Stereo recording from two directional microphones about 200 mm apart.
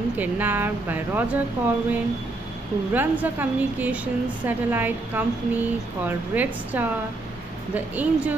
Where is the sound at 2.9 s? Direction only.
10° right (ahead or behind).